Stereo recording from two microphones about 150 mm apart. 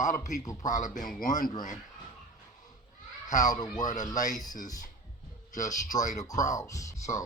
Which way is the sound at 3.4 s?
25° left (ahead or behind).